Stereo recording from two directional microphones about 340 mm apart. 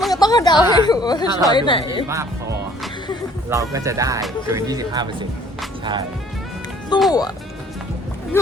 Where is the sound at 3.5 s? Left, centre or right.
Centre.